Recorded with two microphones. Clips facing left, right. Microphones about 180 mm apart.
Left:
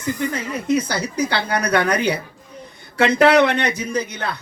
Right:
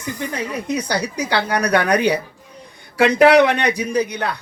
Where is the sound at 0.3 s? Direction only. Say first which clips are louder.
Left 1 dB; 15° right (ahead or behind).